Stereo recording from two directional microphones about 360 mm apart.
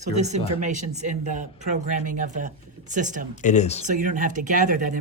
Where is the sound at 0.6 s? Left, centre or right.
Centre.